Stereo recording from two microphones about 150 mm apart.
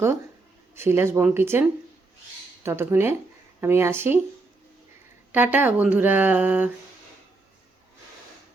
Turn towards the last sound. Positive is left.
turn(degrees=-10)  # may be behind; listen again after turning